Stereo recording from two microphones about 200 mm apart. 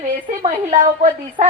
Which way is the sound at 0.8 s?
40° right (ahead or behind).